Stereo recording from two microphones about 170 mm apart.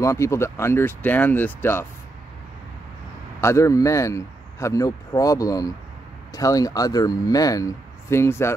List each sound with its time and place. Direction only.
0.0 s speech: 15° left (ahead or behind)
3.3 s a man's voice: 15° left (ahead or behind)